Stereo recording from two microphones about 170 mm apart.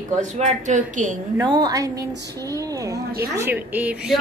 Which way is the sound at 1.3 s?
25° right (ahead or behind).